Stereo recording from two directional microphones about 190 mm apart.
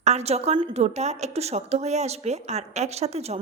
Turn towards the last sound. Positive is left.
turn(degrees=-35)  # may be behind; listen again after turning